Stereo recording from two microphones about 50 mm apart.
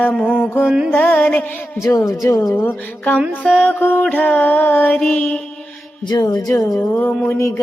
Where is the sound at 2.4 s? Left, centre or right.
Left.